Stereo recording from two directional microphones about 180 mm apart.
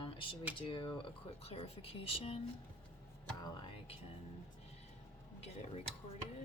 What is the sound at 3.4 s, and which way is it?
Music, 25° left (ahead or behind).